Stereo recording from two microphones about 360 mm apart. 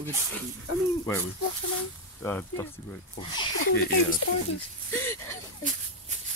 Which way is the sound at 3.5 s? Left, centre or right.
Left.